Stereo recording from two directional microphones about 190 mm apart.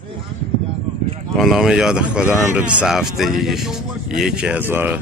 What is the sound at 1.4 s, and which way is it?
Speech, centre (ahead or behind).